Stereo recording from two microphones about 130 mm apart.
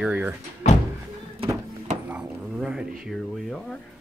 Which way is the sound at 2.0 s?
5° right (ahead or behind).